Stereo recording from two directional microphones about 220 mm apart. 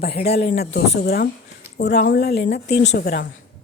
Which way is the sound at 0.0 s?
45° left (ahead or behind).